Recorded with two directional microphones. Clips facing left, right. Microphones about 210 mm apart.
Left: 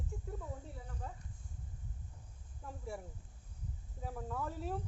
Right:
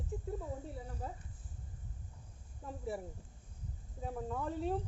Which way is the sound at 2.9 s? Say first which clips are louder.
Right 4 dB; centre (ahead or behind).